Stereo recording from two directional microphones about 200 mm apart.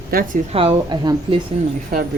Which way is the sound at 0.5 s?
25° right (ahead or behind).